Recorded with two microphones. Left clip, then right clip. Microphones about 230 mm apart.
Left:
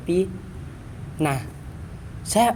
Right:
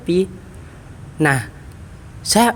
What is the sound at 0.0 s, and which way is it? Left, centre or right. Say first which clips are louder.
A man's voice: right 4 dB; right.